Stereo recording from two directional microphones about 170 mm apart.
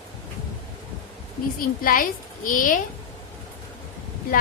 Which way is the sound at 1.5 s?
55° left (ahead or behind).